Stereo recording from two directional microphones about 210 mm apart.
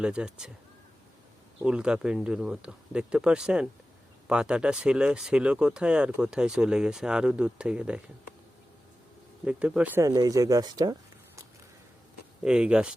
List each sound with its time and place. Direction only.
0.0 s speech: 5° right (ahead or behind)
1.6 s speech: 5° right (ahead or behind)
9.4 s speech: 5° right (ahead or behind)
12.5 s speech: 5° right (ahead or behind)